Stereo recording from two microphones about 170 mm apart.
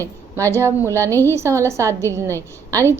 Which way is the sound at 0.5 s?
15° right (ahead or behind).